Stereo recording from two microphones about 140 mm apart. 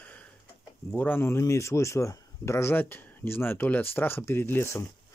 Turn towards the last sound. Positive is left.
turn(degrees=15)  # may be behind; listen again after turning